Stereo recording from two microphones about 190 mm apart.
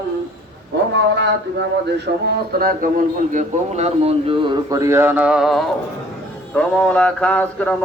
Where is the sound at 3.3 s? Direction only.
40° right (ahead or behind).